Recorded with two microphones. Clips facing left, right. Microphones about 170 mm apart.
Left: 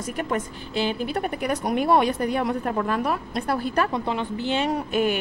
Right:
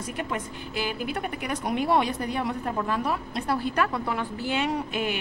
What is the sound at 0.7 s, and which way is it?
A woman's voice, 30° left (ahead or behind).